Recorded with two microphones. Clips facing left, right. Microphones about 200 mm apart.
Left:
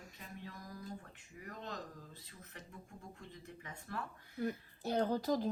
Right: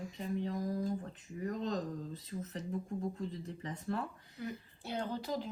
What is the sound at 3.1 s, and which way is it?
Speech, 35° right (ahead or behind).